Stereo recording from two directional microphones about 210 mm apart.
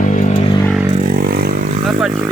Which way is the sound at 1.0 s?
45° right (ahead or behind).